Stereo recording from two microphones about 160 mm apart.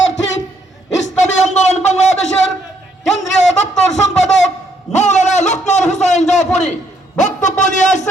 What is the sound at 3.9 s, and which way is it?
Wind instrument, 45° left (ahead or behind).